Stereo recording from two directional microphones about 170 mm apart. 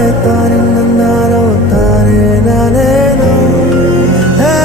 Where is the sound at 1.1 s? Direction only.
Centre (ahead or behind).